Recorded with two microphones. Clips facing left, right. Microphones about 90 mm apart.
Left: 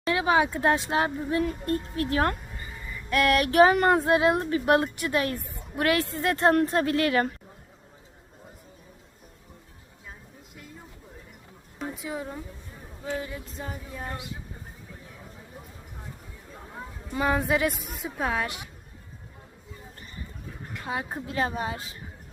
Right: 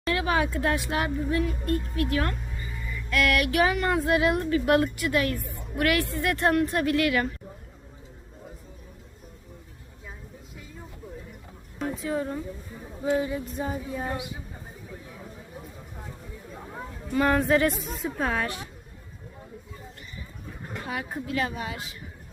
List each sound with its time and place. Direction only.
0.1 s a woman's voice: 20° left (ahead or behind); by 4.0 s 40° left (ahead or behind)
4.0 s a woman's voice: 25° left (ahead or behind)
12.0 s speech: 5° left (ahead or behind)
13.0 s speech: 5° right (ahead or behind)
17.1 s a woman's voice: 10° left (ahead or behind)
20.8 s a woman's voice: 25° left (ahead or behind)